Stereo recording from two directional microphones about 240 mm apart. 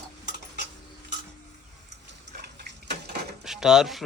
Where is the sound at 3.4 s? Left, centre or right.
Centre.